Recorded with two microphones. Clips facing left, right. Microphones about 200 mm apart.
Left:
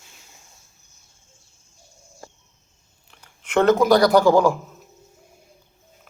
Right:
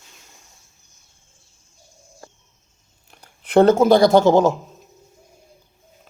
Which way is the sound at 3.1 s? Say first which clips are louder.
Right 6 dB; 35° right (ahead or behind).